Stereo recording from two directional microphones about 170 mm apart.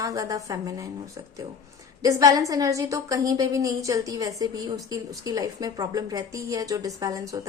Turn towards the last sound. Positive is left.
turn(degrees=-20)  # may be behind; listen again after turning